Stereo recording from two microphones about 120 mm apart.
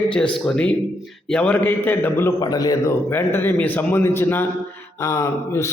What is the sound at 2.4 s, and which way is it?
Speech, 30° left (ahead or behind).